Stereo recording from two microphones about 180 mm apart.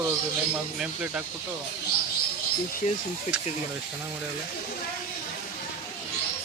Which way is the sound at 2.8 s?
40° left (ahead or behind).